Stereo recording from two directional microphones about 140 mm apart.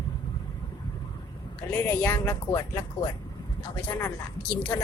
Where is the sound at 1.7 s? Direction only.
15° left (ahead or behind).